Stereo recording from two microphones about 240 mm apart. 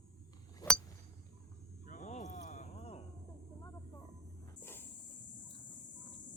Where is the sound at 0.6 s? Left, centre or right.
Centre.